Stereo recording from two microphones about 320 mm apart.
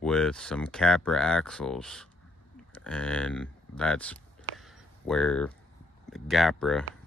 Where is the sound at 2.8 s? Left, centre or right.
Centre.